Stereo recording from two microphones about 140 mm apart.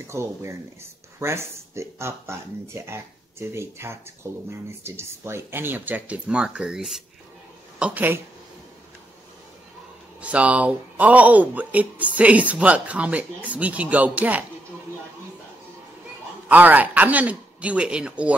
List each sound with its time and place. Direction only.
0.0 s speech: 20° right (ahead or behind)
10.2 s speech: 10° right (ahead or behind)
16.4 s speech: 10° right (ahead or behind)